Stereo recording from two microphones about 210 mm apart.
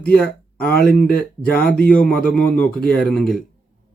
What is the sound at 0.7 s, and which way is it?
Speech, 45° left (ahead or behind).